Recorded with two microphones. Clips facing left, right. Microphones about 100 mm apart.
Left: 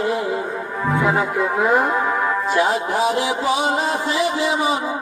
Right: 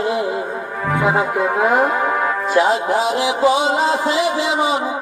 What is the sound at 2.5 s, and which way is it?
Music, 20° right (ahead or behind).